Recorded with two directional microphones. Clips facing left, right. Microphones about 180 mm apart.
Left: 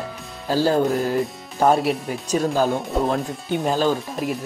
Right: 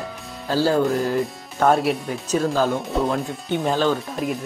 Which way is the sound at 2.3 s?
15° left (ahead or behind).